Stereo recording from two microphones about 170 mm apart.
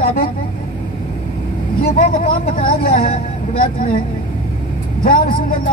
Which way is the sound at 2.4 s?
60° left (ahead or behind).